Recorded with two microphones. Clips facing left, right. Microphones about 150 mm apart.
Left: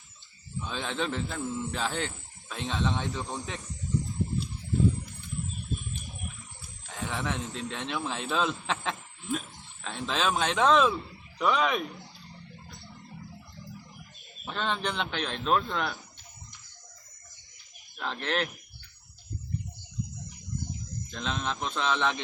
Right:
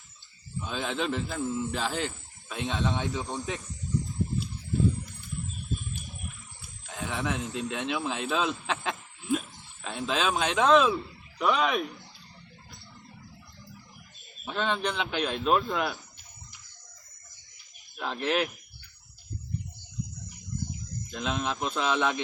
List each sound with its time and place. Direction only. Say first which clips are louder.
0.6 s speech: right 1 dB; 5° right (ahead or behind)
6.8 s speech: right 1 dB; centre (ahead or behind)
14.4 s speech: right 2 dB; centre (ahead or behind)
17.9 s speech: right 3 dB; 5° right (ahead or behind)
21.1 s speech: right 2 dB; 10° right (ahead or behind)